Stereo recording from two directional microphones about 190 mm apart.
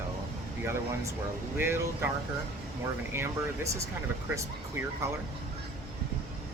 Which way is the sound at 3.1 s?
15° right (ahead or behind).